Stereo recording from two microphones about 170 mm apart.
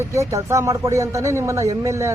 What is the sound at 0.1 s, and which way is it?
Speech, 20° right (ahead or behind).